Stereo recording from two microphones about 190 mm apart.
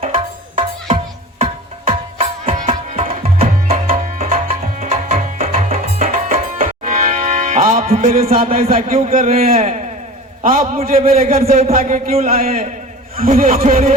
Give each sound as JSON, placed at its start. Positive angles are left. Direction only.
{"t": 0.0, "sound": "music", "side_deg": -30}
{"t": 1.9, "sound": "tabla", "side_deg": -30}
{"t": 4.2, "sound": "music", "side_deg": -35}
{"t": 9.0, "sound": "a man's voice", "side_deg": -35}
{"t": 10.9, "sound": "speech", "side_deg": -50}
{"t": 11.3, "sound": "a man's voice", "side_deg": -35}